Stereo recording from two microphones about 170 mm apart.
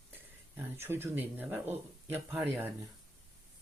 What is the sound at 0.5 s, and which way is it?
Speech, 15° right (ahead or behind).